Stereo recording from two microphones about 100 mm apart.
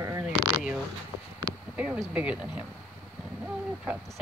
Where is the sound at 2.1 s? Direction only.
10° right (ahead or behind).